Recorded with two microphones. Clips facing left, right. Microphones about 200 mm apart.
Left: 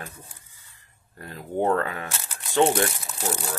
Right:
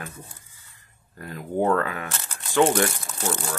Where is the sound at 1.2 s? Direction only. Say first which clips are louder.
Right 1 dB; 30° left (ahead or behind).